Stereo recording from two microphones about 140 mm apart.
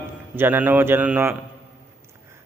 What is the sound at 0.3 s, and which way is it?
Speech, 15° right (ahead or behind).